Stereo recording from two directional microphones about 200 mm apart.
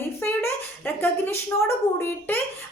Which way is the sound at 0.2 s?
10° left (ahead or behind).